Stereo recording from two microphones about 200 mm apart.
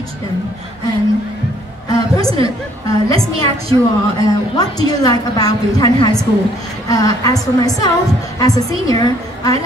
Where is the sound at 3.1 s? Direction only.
30° right (ahead or behind).